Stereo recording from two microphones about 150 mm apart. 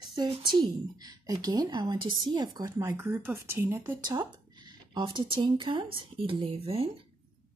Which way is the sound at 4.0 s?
30° right (ahead or behind).